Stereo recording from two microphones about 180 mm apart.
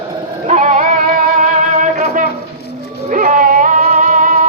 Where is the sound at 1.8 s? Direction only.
45° right (ahead or behind).